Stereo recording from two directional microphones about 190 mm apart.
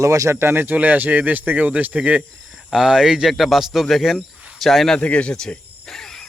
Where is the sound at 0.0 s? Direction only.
15° right (ahead or behind).